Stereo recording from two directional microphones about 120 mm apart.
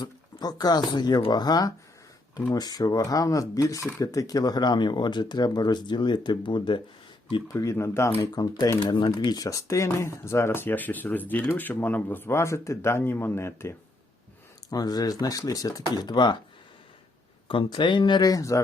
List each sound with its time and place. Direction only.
0.0 s speech: 35° left (ahead or behind)
7.4 s speech: 25° left (ahead or behind)
8.3 s speech: 35° left (ahead or behind)
8.8 s speech: 40° left (ahead or behind); by 13.7 s 20° left (ahead or behind)
14.7 s speech: 30° left (ahead or behind)
17.5 s speech: 45° left (ahead or behind); by 18.6 s 30° left (ahead or behind)